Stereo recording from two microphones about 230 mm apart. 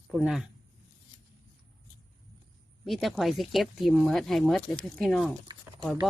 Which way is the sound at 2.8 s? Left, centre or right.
Centre.